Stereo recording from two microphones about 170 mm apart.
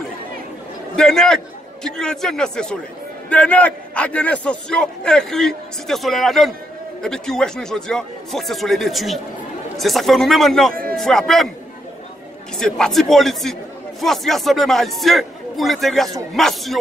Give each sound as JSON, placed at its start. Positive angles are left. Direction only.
{"t": 0.9, "sound": "a man's voice", "side_deg": 5}
{"t": 10.7, "sound": "a sound", "side_deg": -55}
{"t": 11.0, "sound": "a man's voice", "side_deg": 0}
{"t": 12.5, "sound": "a man's voice", "side_deg": 5}